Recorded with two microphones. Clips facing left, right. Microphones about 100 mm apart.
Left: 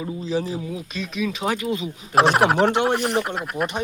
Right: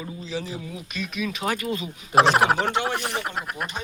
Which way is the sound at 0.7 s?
25° left (ahead or behind).